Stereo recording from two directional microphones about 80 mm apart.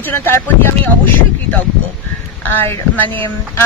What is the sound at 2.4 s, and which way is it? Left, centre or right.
Speech, left.